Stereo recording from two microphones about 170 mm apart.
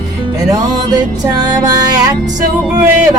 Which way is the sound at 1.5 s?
25° right (ahead or behind).